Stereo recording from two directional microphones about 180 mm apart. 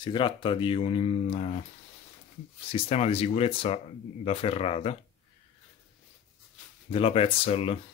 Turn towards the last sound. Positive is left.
turn(degrees=35)  # may be behind; listen again after turning